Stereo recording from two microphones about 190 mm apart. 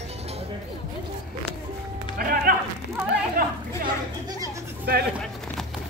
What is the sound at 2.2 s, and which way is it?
Music, 50° right (ahead or behind).